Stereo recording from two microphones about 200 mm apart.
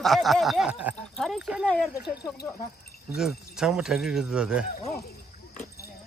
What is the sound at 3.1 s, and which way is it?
Speech, centre (ahead or behind).